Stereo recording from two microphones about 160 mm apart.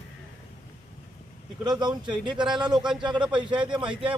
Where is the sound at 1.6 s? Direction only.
25° right (ahead or behind).